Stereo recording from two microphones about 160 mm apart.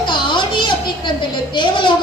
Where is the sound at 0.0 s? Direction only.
30° left (ahead or behind).